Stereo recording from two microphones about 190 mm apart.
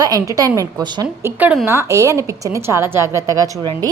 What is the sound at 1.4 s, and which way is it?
A woman's voice, 10° right (ahead or behind).